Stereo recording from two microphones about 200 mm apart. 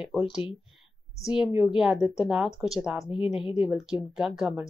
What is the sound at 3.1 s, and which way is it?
Speech, 25° left (ahead or behind).